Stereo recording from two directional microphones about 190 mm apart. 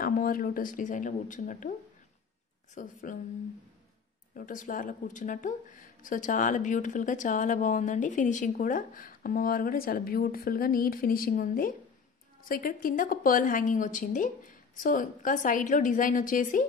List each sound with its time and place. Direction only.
0.0 s speech: 50° left (ahead or behind)
2.7 s speech: 45° left (ahead or behind)
4.4 s speech: 45° left (ahead or behind)